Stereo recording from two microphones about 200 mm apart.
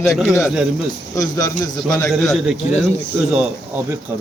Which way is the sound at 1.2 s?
15° left (ahead or behind).